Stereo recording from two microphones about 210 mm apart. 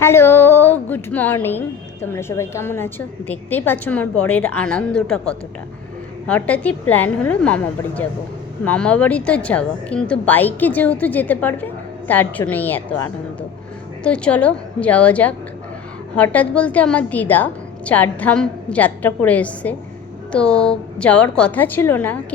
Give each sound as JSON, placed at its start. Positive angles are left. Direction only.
{"t": 0.0, "sound": "a woman's voice", "side_deg": 10}